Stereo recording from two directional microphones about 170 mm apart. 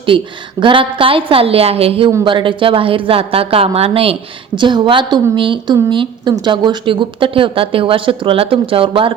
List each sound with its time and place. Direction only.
0.6 s a woman's voice: 30° right (ahead or behind)